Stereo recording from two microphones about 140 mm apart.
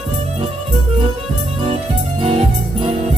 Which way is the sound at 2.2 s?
40° right (ahead or behind).